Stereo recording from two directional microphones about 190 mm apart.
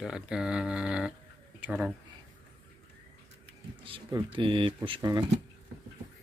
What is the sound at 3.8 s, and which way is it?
Speech, 25° right (ahead or behind).